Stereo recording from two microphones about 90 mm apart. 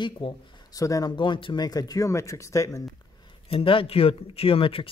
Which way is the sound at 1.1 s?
60° left (ahead or behind).